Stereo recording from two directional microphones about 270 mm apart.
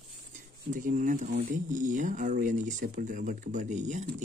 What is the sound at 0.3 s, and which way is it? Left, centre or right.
Speech, right.